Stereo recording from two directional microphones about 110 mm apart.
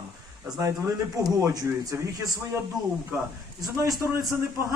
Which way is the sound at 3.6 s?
35° right (ahead or behind).